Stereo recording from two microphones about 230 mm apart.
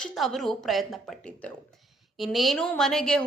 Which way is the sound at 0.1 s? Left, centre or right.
Centre.